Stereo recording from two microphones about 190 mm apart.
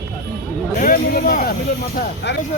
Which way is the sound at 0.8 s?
45° left (ahead or behind).